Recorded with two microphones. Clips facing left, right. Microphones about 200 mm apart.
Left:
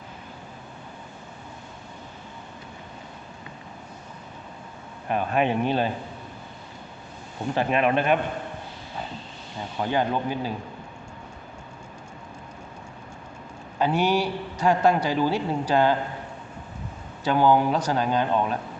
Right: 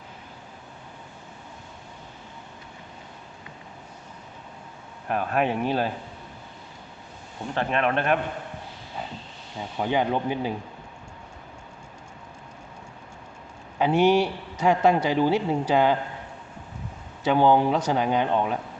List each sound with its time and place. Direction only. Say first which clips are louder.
5.0 s speech: left 1 dB; centre (ahead or behind)
7.5 s speech: left 2 dB; 5° left (ahead or behind)
9.7 s a man's voice: right 1 dB; 15° right (ahead or behind)
13.7 s a man's voice: right 3 dB; 20° right (ahead or behind)
17.2 s a man's voice: right 1 dB; 25° right (ahead or behind)